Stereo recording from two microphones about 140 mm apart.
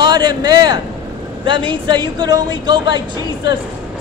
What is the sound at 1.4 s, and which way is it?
Speech, 35° right (ahead or behind).